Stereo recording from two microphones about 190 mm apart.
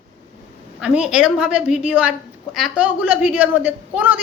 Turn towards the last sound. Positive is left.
turn(degrees=-10)  # may be behind; listen again after turning